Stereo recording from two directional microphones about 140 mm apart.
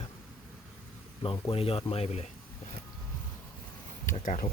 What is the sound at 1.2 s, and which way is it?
Speech, 40° left (ahead or behind).